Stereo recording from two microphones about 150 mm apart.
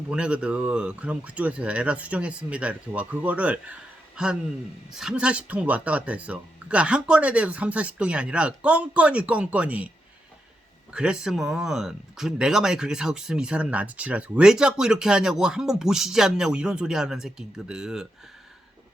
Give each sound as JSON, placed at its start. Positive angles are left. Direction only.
{"t": 0.1, "sound": "speech", "side_deg": -5}
{"t": 10.9, "sound": "speech", "side_deg": -5}